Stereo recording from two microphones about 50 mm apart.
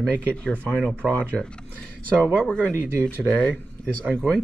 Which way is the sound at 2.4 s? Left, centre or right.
Left.